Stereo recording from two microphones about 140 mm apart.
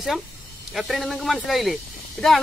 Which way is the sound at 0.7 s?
Centre (ahead or behind).